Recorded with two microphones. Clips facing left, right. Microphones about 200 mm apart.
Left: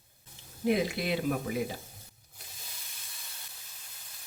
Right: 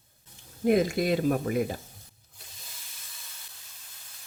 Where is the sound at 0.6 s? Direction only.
45° right (ahead or behind).